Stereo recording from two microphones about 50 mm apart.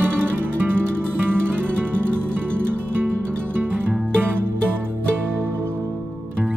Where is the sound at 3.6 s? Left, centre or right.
Right.